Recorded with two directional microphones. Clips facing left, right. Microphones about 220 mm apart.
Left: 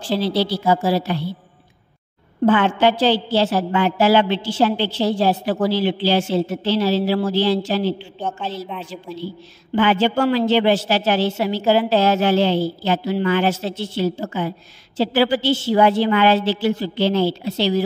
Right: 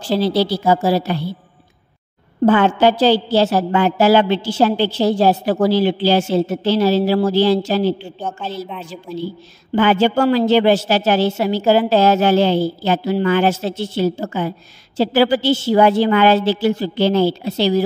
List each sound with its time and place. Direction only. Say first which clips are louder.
0.1 s a woman's voice: right 3 dB; 40° right (ahead or behind)
2.4 s a woman's voice: right 3 dB; 40° right (ahead or behind)
8.2 s a woman's voice: right 1 dB; 5° right (ahead or behind)
9.8 s a woman's voice: right 3 dB; 45° right (ahead or behind)